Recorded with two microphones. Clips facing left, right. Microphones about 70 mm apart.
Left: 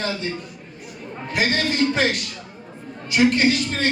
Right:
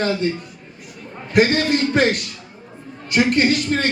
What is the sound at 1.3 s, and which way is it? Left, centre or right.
A man's voice, right.